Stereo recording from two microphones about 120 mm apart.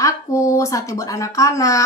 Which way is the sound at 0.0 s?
25° left (ahead or behind).